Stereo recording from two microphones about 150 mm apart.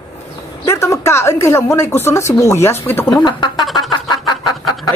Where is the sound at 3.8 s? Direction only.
25° left (ahead or behind).